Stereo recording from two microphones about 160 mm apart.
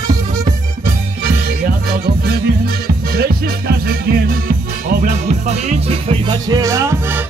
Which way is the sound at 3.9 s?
70° right (ahead or behind).